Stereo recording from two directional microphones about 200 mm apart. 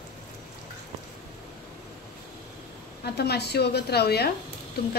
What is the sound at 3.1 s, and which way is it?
A woman's voice, 55° left (ahead or behind).